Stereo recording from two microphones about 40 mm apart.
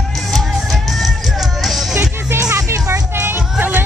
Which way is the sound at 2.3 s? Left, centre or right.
Right.